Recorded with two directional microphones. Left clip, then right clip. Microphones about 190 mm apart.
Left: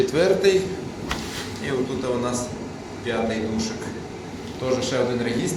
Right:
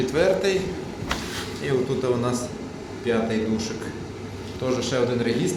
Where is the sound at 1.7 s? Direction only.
25° right (ahead or behind).